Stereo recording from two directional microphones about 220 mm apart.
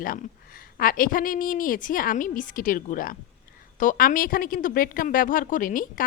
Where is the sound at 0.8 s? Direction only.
40° left (ahead or behind).